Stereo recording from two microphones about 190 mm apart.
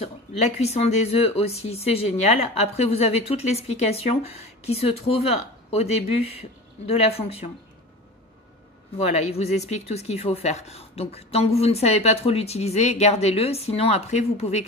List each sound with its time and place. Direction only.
0.6 s speech: 35° left (ahead or behind)
9.1 s speech: 35° left (ahead or behind)